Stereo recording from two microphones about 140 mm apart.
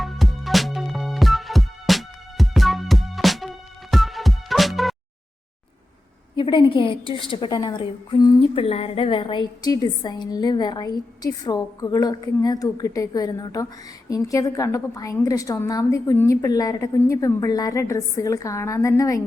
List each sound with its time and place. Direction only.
0.0 s music: centre (ahead or behind)
6.3 s a woman's voice: 35° left (ahead or behind)